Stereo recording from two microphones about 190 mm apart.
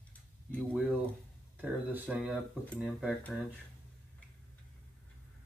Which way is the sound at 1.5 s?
10° right (ahead or behind).